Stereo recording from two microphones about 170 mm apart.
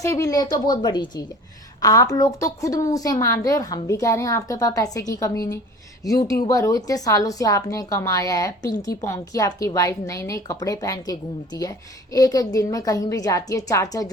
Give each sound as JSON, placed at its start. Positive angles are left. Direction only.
{"t": 0.0, "sound": "a woman's voice", "side_deg": 20}